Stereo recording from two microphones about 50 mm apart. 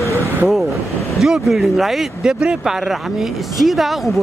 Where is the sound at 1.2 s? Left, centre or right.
Centre.